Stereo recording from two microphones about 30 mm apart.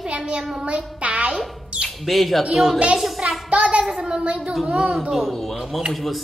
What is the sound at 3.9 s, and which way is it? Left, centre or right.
Speech, centre.